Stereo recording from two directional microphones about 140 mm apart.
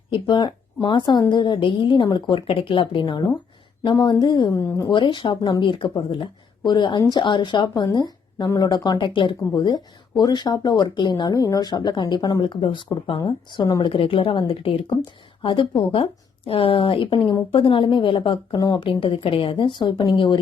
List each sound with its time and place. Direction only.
0.1 s speech: 30° left (ahead or behind)
18.9 s speech: 40° left (ahead or behind)